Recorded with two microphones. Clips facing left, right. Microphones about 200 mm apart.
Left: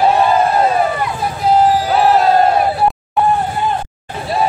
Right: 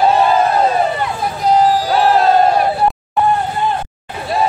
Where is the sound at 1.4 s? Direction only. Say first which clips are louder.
Left 1 dB; 5° left (ahead or behind).